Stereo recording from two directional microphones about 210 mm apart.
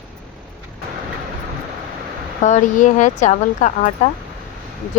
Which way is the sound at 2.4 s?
35° left (ahead or behind).